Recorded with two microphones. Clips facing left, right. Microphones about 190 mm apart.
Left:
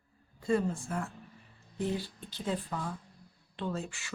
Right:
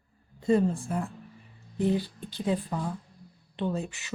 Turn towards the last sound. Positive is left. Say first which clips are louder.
# right 5 dB
turn(degrees=-20)  # may be behind; listen again after turning